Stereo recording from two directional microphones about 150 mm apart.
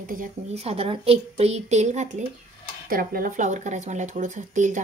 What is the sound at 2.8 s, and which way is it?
Speech, 70° right (ahead or behind).